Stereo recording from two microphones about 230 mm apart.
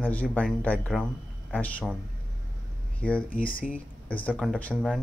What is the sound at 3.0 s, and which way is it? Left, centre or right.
Speech, centre.